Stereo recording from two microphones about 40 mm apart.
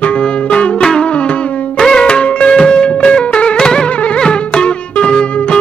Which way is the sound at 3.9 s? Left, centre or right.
Left.